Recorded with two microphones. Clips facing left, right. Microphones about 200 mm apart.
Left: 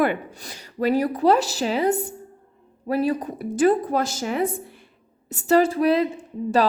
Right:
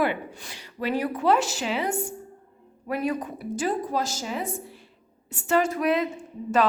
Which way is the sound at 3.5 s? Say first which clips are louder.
Left 8 dB; 55° left (ahead or behind).